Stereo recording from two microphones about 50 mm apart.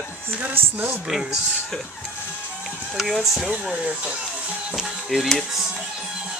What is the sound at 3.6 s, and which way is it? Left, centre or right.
Speech, centre.